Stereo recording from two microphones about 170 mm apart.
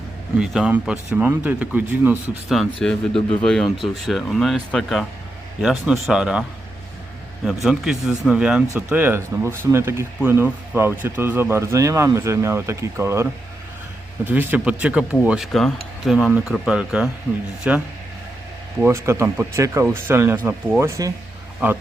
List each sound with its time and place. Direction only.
0.3 s speech: 5° right (ahead or behind)
2.6 s speech: 5° left (ahead or behind)
7.4 s speech: centre (ahead or behind)
14.3 s speech: 10° right (ahead or behind)
18.8 s speech: 15° right (ahead or behind)